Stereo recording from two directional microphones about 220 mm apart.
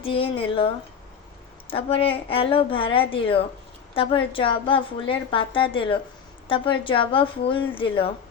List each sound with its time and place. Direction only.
0.0 s a woman's voice: 25° left (ahead or behind)
1.7 s a woman's voice: 25° left (ahead or behind)